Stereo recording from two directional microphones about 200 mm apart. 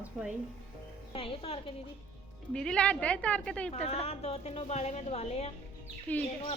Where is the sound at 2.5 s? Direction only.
5° left (ahead or behind).